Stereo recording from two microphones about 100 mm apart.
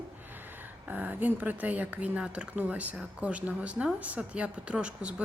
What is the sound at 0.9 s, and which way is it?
A woman's voice, 15° right (ahead or behind).